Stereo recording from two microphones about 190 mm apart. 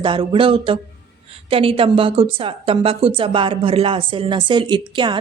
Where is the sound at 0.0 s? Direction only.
25° right (ahead or behind).